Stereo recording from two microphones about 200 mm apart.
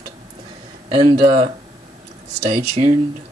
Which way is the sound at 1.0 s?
35° right (ahead or behind).